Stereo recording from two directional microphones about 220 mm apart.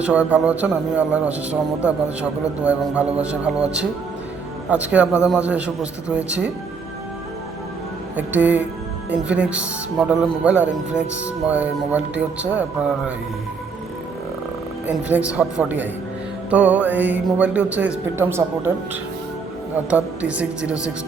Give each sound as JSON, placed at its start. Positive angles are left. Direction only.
{"t": 0.0, "sound": "speech", "side_deg": -5}
{"t": 8.1, "sound": "speech", "side_deg": -5}
{"t": 14.8, "sound": "speech", "side_deg": -5}
{"t": 19.9, "sound": "speech", "side_deg": -5}